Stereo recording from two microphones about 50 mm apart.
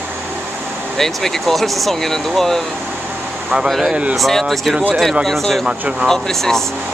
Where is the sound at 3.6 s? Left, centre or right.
Centre.